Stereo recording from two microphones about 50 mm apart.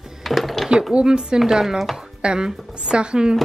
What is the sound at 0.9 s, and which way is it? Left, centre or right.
Speech, centre.